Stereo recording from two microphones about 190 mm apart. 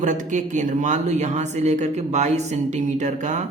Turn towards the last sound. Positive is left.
turn(degrees=-40)  # may be behind; listen again after turning